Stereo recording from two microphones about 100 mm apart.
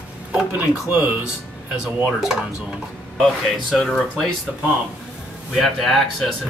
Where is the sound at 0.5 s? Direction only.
15° right (ahead or behind).